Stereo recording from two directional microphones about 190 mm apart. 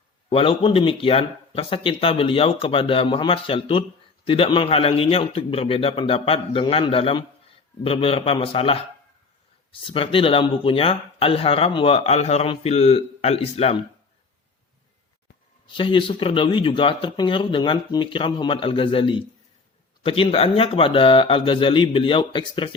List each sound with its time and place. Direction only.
0.3 s speech: 30° left (ahead or behind)
9.8 s speech: 30° left (ahead or behind)
15.6 s speech: 25° left (ahead or behind)